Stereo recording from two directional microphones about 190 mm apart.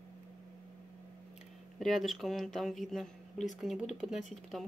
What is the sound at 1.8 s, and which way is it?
Speech, centre (ahead or behind).